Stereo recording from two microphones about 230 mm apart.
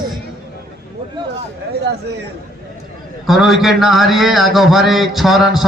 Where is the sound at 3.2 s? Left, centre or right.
Centre.